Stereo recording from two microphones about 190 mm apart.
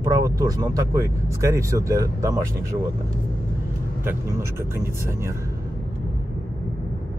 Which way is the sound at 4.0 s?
15° right (ahead or behind).